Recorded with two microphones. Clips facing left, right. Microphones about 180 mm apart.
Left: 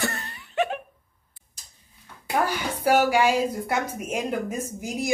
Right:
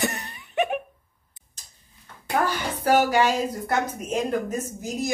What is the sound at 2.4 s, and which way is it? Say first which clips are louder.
A woman's voice: left 1 dB; 10° left (ahead or behind).